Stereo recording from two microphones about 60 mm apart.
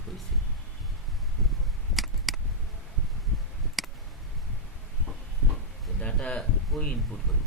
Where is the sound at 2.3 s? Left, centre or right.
Centre.